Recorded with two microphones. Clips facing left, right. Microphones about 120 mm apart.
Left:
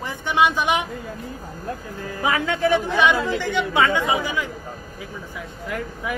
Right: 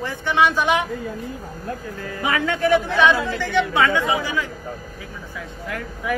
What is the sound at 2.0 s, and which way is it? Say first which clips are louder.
Speech: even; 20° left (ahead or behind).